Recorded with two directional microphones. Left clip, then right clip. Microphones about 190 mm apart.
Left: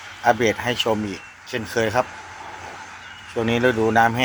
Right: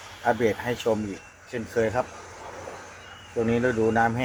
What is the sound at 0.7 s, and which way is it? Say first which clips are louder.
Speech: left 4 dB; 30° left (ahead or behind).